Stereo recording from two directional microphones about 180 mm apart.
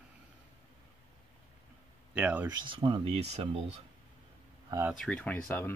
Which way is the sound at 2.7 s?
30° right (ahead or behind).